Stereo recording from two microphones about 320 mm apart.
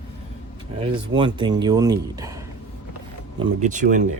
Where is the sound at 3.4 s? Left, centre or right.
Right.